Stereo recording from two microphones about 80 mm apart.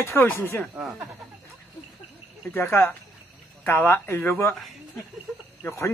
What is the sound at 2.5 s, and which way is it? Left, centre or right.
Speech, left.